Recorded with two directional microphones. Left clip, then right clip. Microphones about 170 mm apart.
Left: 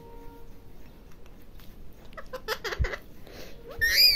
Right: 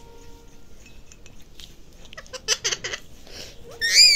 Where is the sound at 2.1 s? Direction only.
10° left (ahead or behind).